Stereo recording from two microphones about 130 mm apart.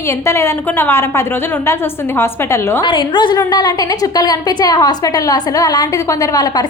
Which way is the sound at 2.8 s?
40° left (ahead or behind).